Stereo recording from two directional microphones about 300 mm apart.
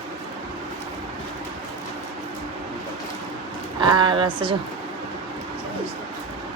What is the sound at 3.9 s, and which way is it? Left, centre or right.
Speech, centre.